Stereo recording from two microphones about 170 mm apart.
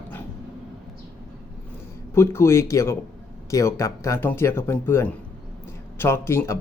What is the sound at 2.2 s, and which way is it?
Speech, 15° left (ahead or behind).